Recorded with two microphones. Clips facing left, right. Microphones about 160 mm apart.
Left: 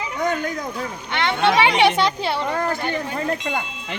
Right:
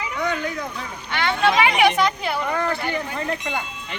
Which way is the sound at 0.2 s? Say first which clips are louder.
Left 2 dB; 45° left (ahead or behind).